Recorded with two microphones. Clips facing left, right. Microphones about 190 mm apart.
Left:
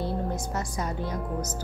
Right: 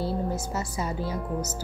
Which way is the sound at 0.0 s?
5° right (ahead or behind).